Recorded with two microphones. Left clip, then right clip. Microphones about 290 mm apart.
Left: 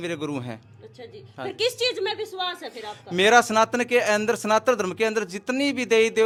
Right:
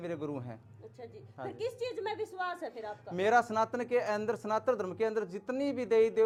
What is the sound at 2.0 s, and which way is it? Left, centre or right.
Speech, left.